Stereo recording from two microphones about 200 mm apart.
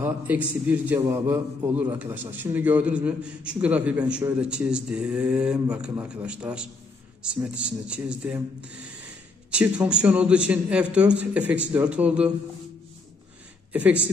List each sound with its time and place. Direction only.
0.0 s a man's voice: 10° right (ahead or behind)